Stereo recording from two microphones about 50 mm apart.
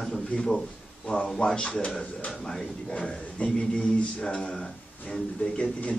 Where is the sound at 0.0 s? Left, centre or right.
Centre.